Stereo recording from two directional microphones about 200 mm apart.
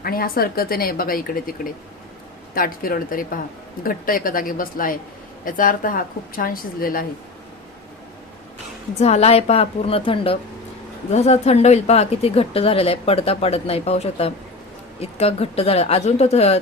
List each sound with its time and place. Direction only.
0.0 s a woman's voice: 45° left (ahead or behind)
9.0 s a woman's voice: 35° left (ahead or behind)